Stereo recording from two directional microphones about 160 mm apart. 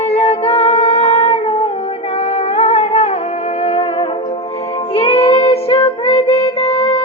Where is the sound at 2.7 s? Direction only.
35° left (ahead or behind).